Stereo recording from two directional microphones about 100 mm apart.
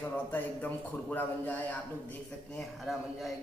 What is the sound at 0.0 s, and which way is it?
A man's voice, 20° left (ahead or behind).